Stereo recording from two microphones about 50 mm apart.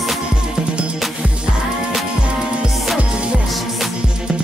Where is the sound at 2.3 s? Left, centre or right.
Right.